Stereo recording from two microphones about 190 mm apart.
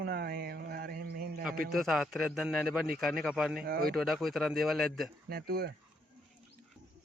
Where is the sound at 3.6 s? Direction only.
50° right (ahead or behind).